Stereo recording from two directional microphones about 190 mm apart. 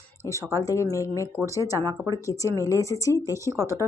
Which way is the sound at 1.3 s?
15° right (ahead or behind).